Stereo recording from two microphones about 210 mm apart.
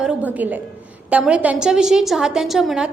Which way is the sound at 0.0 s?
5° right (ahead or behind).